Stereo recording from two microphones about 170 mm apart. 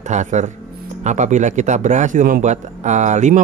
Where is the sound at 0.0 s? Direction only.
45° right (ahead or behind).